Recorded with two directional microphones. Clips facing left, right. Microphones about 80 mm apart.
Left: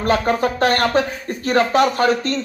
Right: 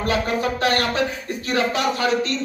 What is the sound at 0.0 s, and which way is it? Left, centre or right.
Speech, left.